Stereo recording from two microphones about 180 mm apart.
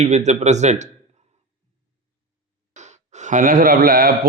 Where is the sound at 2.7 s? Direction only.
40° right (ahead or behind).